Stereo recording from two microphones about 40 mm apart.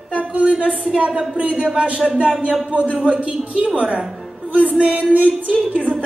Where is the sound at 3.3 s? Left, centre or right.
Right.